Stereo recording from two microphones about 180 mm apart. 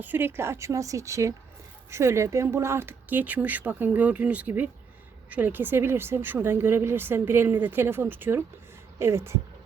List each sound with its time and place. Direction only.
0.0 s a woman's voice: 10° right (ahead or behind)